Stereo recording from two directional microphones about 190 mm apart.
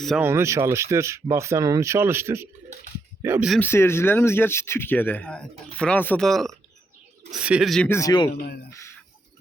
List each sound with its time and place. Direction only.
0.2 s speech: 15° right (ahead or behind)
3.6 s speech: 10° left (ahead or behind)
7.9 s speech: 15° left (ahead or behind)
8.4 s speech: 55° left (ahead or behind)